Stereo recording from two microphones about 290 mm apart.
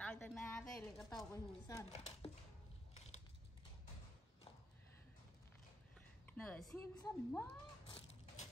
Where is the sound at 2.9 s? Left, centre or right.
Left.